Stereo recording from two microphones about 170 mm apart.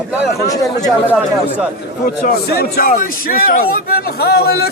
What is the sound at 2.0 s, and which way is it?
A man's voice, 55° left (ahead or behind).